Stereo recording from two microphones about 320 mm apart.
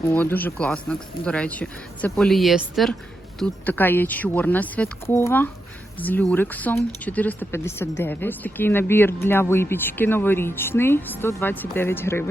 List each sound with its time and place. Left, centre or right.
0.1 s speech: centre